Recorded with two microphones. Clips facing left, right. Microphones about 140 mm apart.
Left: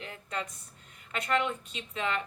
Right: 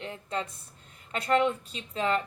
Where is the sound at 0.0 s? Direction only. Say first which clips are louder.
Right 4 dB; 30° right (ahead or behind).